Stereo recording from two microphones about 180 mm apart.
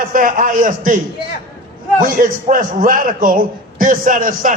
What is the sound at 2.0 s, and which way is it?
A man's voice, 50° right (ahead or behind).